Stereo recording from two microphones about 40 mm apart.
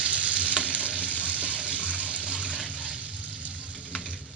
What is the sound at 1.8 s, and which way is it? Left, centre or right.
Water, left.